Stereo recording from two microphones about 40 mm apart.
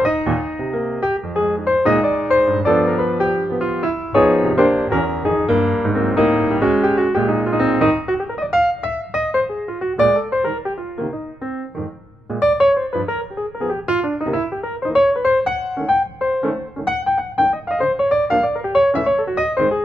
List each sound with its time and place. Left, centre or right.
0.0 s music: centre
1.7 s music: right
2.1 s music: centre
3.3 s music: right
4.4 s music: centre
6.6 s music: centre
12.4 s music: centre
13.7 s piano: right
15.0 s music: centre
15.2 s music: centre
17.1 s piano: right
17.6 s music: centre
19.3 s music: right